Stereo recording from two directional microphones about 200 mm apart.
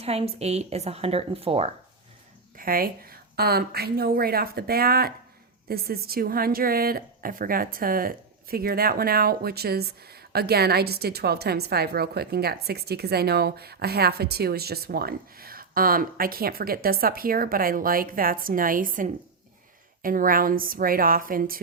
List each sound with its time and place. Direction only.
0.0 s speech: 30° right (ahead or behind)
2.6 s a woman's voice: 45° right (ahead or behind)